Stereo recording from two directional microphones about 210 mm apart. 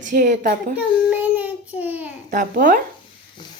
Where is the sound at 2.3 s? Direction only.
40° right (ahead or behind).